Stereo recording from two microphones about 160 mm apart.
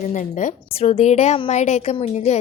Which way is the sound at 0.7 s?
40° left (ahead or behind).